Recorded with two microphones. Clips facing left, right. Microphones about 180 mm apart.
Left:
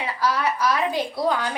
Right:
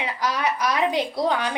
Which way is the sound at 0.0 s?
20° right (ahead or behind).